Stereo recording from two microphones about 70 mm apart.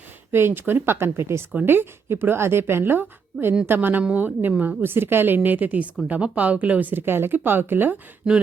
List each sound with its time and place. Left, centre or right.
0.3 s speech: right
8.2 s speech: centre